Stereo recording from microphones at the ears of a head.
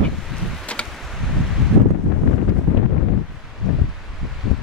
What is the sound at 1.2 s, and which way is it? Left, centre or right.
Wind noise, left.